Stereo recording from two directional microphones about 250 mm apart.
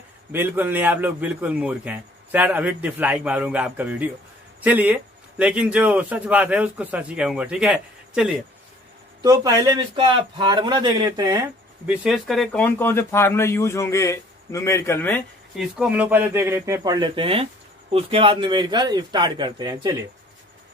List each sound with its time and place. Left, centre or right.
0.3 s a man's voice: centre
9.2 s a man's voice: centre
11.9 s speech: centre
15.8 s a man's voice: centre